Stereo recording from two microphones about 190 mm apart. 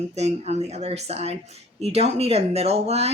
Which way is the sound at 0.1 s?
35° right (ahead or behind).